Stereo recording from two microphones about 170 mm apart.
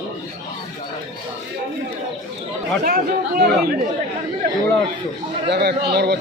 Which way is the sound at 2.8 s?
65° right (ahead or behind).